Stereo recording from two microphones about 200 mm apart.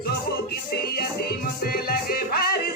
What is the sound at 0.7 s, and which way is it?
Music, 50° left (ahead or behind).